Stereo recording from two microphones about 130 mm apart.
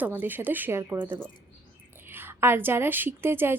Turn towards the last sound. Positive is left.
turn(degrees=-15)  # may be behind; listen again after turning